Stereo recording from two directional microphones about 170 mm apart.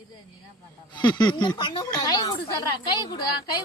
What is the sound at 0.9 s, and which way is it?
A woman's voice, 25° left (ahead or behind).